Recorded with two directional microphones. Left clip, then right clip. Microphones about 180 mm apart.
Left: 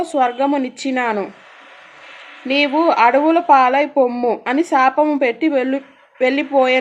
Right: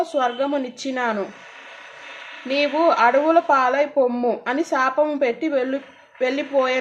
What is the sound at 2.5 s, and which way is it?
Speech, 45° left (ahead or behind).